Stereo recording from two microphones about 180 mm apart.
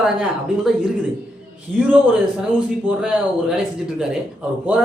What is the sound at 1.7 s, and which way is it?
Speech, 10° right (ahead or behind).